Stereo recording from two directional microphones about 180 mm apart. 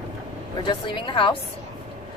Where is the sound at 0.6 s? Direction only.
25° left (ahead or behind).